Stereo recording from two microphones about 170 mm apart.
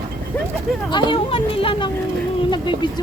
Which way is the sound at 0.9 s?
30° left (ahead or behind).